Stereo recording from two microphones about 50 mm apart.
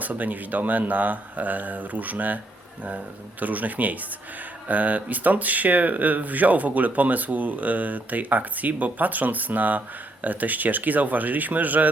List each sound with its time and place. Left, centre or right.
0.0 s speech: right
3.4 s speech: right